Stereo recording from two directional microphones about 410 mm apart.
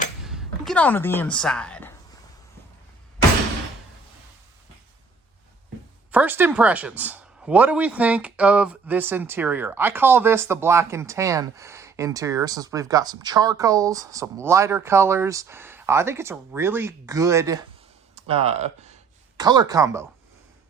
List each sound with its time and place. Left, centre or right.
0.3 s speech: centre
6.1 s speech: centre